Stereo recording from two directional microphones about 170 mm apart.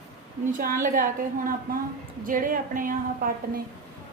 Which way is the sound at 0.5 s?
55° right (ahead or behind).